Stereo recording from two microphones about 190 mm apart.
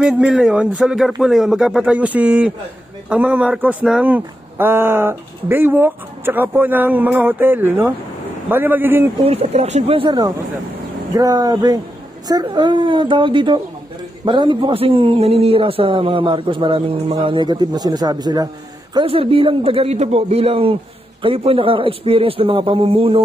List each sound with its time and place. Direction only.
0.0 s speech: 5° right (ahead or behind)
9.2 s a man's voice: 35° right (ahead or behind)